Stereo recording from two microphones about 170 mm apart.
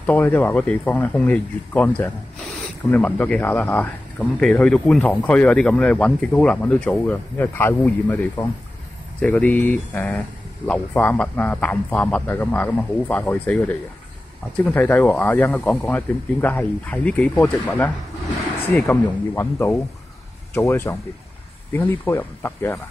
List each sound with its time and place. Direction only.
0.0 s speech: 10° left (ahead or behind)